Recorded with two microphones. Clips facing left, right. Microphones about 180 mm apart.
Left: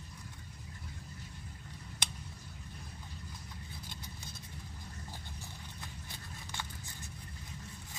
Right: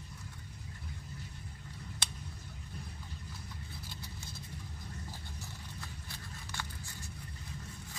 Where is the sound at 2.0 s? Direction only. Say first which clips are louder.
Left 2 dB; 15° left (ahead or behind).